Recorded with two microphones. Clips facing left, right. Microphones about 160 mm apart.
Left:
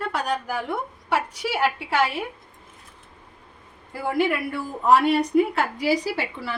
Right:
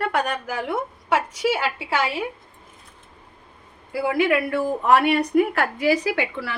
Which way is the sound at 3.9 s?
90° right.